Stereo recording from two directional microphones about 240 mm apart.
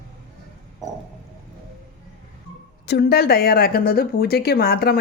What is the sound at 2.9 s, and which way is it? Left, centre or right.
A woman's voice, left.